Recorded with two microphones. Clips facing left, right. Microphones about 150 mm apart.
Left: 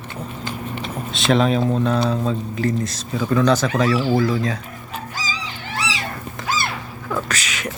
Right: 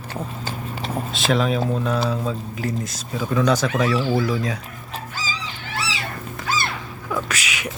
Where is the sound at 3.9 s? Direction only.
15° left (ahead or behind).